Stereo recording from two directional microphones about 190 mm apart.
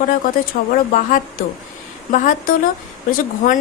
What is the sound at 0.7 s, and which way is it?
A woman's voice, 45° left (ahead or behind).